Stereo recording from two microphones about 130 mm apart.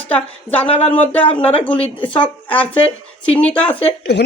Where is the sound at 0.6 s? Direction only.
45° left (ahead or behind).